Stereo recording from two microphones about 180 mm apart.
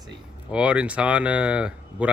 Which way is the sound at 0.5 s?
5° right (ahead or behind).